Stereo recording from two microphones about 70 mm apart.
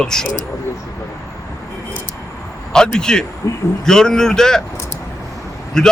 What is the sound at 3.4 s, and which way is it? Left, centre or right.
Speech, left.